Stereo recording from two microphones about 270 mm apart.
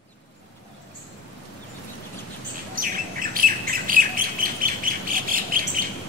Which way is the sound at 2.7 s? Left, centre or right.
Right.